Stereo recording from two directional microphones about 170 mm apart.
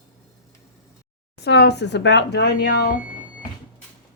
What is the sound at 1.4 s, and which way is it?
Speech, 80° left.